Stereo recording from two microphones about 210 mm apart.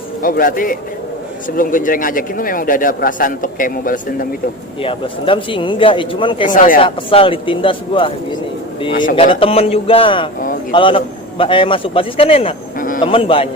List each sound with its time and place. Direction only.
0.2 s a man's voice: 40° left (ahead or behind)
4.8 s a man's voice: 25° left (ahead or behind)
6.5 s a man's voice: 40° left (ahead or behind)
6.8 s a man's voice: 25° left (ahead or behind)
12.8 s a sound: 40° left (ahead or behind)
13.1 s a man's voice: 25° left (ahead or behind)